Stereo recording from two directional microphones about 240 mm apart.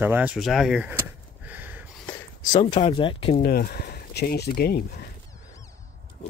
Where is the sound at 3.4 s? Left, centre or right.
Left.